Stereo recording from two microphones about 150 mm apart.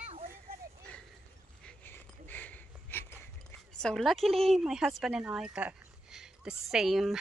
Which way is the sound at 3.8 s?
Centre (ahead or behind).